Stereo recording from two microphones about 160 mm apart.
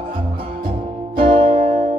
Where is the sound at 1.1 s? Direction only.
35° right (ahead or behind).